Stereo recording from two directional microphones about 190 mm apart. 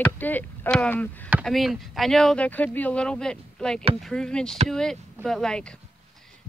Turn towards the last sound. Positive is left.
turn(degrees=0)  # may be behind; listen again after turning